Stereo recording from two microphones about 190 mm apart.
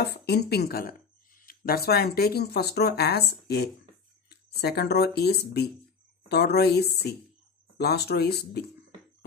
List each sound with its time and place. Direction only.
0.0 s speech: 60° left (ahead or behind)